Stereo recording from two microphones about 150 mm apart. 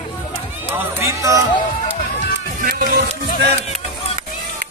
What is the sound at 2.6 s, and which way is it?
Speech, 70° right (ahead or behind).